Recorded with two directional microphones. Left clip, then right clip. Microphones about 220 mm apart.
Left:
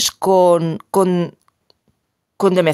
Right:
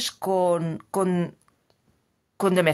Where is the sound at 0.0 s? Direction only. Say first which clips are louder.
Left 10 dB; 30° left (ahead or behind).